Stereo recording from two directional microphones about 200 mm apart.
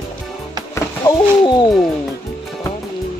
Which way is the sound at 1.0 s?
20° left (ahead or behind).